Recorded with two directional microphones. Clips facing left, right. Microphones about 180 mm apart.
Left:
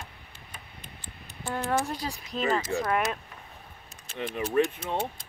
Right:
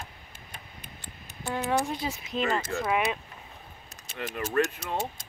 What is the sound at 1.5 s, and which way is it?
Speech, centre (ahead or behind).